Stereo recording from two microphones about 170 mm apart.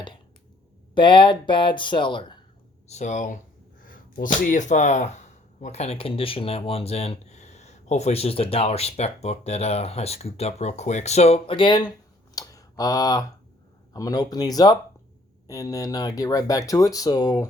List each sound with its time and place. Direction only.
0.9 s speech: 30° left (ahead or behind)
2.8 s speech: 40° left (ahead or behind)
12.3 s a sound: 20° left (ahead or behind)
13.9 s speech: 20° left (ahead or behind)